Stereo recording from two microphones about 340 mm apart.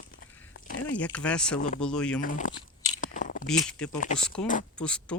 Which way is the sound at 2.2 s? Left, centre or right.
Left.